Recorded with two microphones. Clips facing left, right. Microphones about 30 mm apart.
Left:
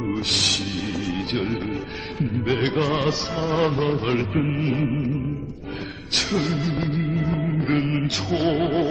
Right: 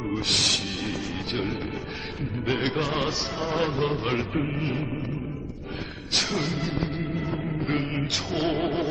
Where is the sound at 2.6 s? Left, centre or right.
Centre.